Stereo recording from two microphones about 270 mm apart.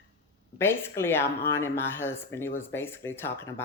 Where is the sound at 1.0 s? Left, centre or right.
Centre.